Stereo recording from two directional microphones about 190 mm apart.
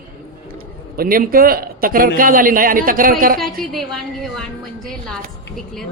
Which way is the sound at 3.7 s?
Centre (ahead or behind).